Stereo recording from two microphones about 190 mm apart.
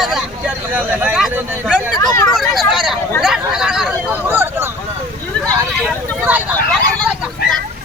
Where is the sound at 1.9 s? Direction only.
20° left (ahead or behind).